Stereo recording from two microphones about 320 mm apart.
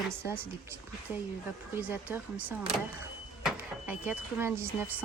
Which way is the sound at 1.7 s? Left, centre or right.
Centre.